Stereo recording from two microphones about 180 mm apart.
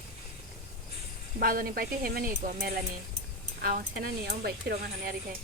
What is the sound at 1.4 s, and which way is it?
Speech, 55° right (ahead or behind).